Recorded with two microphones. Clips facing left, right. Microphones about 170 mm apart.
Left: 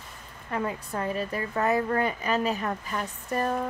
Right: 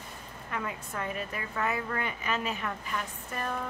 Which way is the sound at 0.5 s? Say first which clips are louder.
Left 6 dB; 35° left (ahead or behind).